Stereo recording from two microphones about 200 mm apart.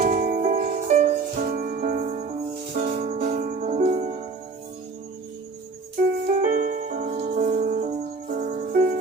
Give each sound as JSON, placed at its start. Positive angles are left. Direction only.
{"t": 0.0, "sound": "music", "side_deg": -40}
{"t": 6.2, "sound": "music", "side_deg": -40}